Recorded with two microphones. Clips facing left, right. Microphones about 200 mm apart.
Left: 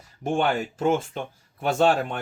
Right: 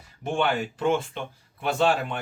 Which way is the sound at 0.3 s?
45° left (ahead or behind).